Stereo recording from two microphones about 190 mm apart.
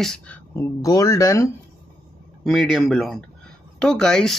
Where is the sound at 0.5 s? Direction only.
15° left (ahead or behind).